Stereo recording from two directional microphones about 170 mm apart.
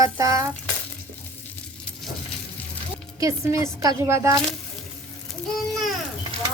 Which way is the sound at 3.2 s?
15° right (ahead or behind).